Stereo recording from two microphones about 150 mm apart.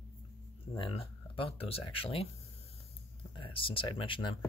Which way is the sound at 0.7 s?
35° left (ahead or behind).